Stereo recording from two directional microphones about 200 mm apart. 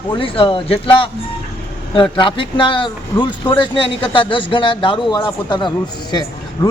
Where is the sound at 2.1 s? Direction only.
25° left (ahead or behind).